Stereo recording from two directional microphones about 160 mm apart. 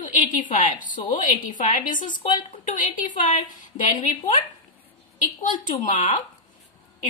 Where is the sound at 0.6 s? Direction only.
55° left (ahead or behind).